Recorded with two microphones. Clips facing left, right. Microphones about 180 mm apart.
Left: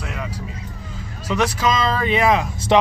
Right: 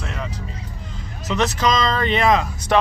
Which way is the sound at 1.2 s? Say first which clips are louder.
Even; 10° left (ahead or behind).